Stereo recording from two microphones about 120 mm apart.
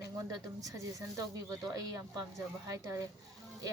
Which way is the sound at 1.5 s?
30° right (ahead or behind).